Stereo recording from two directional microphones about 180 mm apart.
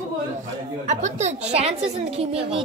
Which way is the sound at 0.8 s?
40° right (ahead or behind).